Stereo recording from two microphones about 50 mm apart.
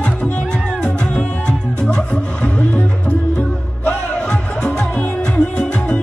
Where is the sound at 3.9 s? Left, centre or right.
Centre.